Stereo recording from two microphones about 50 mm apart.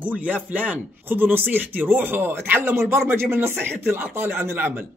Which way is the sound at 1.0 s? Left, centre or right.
Right.